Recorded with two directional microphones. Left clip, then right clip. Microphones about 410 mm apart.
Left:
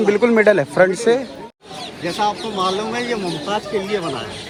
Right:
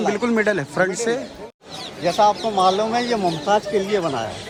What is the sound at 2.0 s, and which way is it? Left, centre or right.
Speech, right.